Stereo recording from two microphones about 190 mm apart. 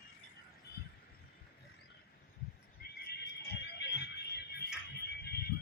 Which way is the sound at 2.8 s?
50° left (ahead or behind).